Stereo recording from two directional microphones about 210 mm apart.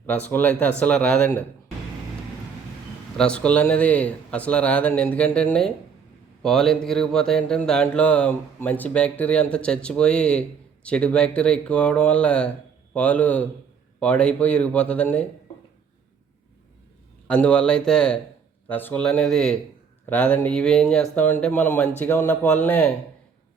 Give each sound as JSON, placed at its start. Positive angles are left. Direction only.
{"t": 0.0, "sound": "speech", "side_deg": 10}
{"t": 3.2, "sound": "speech", "side_deg": 5}
{"t": 17.2, "sound": "speech", "side_deg": 5}